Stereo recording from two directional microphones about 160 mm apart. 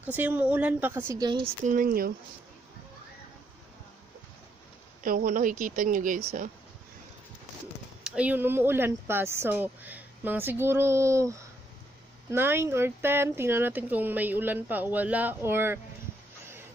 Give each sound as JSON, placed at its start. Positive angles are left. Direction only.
{"t": 0.0, "sound": "speech", "side_deg": -10}
{"t": 1.6, "sound": "speech", "side_deg": -55}
{"t": 5.0, "sound": "speech", "side_deg": -60}
{"t": 8.0, "sound": "speech", "side_deg": -5}